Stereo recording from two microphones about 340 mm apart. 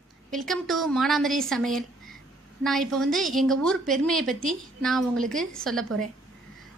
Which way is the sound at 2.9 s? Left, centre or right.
Centre.